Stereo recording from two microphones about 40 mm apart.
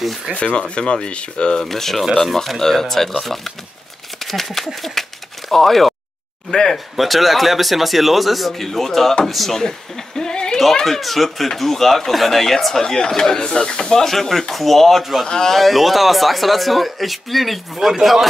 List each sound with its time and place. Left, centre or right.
0.6 s speech: left
1.6 s speech: centre
4.2 s a sound: centre
4.6 s speech: centre
6.5 s speech: centre
7.0 s speech: centre
10.9 s speech: centre
14.0 s speech: centre
15.2 s speech: centre
15.5 s a man's voice: centre